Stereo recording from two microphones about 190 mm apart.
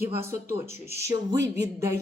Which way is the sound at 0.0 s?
15° right (ahead or behind).